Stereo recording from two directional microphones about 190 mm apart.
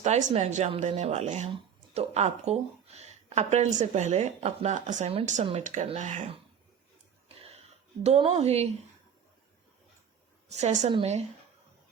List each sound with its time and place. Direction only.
0.0 s speech: 40° right (ahead or behind)
7.3 s a sound: 35° right (ahead or behind)
8.0 s speech: 35° right (ahead or behind)
10.5 s speech: 35° right (ahead or behind)